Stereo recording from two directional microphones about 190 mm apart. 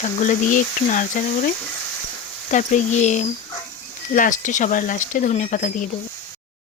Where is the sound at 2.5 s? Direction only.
40° left (ahead or behind).